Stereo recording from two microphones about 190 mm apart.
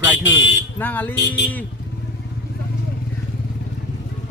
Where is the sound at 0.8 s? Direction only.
10° left (ahead or behind).